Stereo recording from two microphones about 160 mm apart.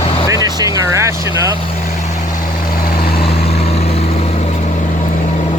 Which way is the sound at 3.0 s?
75° left (ahead or behind).